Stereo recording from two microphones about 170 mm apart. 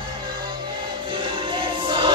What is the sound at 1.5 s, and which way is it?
Choir, 30° right (ahead or behind).